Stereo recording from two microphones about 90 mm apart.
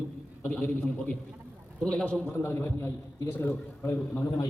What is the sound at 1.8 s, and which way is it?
A man's voice, 10° left (ahead or behind).